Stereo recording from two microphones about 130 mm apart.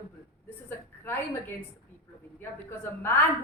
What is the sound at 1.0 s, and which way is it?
Speech, 15° left (ahead or behind).